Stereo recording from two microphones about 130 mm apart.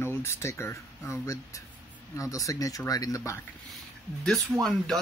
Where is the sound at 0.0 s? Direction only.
20° left (ahead or behind).